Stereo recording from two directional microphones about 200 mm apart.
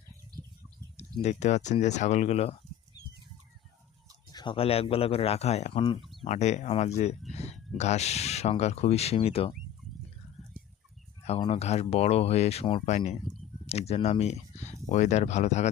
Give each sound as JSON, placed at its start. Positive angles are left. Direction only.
{"t": 0.9, "sound": "speech", "side_deg": 35}
{"t": 4.3, "sound": "speech", "side_deg": 20}
{"t": 6.0, "sound": "bird", "side_deg": 0}
{"t": 6.2, "sound": "speech", "side_deg": 35}
{"t": 11.3, "sound": "speech", "side_deg": 30}
{"t": 13.2, "sound": "a sound", "side_deg": 0}
{"t": 13.7, "sound": "speech", "side_deg": 30}